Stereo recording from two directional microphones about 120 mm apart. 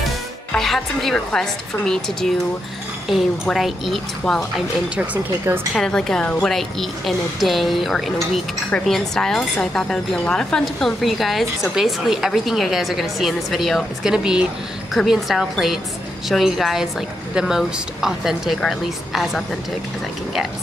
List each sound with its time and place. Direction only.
0.5 s speech: 5° left (ahead or behind)
5.4 s a woman's voice: 20° right (ahead or behind)
5.8 s speech: 5° left (ahead or behind)